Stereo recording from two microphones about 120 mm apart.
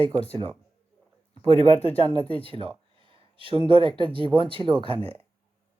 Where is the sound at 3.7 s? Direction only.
45° right (ahead or behind).